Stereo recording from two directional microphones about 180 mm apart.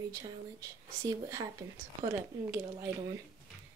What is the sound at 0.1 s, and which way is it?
Speech, 20° right (ahead or behind).